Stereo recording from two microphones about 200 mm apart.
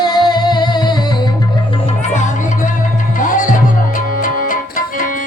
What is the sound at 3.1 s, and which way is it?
Music, 40° left (ahead or behind).